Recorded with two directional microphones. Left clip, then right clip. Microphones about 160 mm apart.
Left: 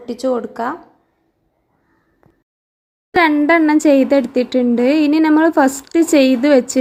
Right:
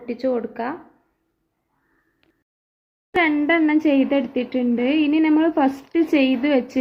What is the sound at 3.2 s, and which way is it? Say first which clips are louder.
A woman's voice: left 6 dB; 20° left (ahead or behind).